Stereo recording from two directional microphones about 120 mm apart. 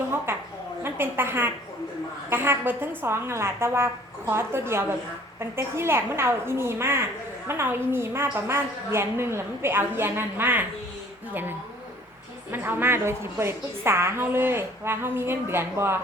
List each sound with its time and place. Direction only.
0.3 s a sound: 20° right (ahead or behind)
0.8 s a woman's voice: 20° right (ahead or behind)
12.5 s a woman's voice: 15° right (ahead or behind)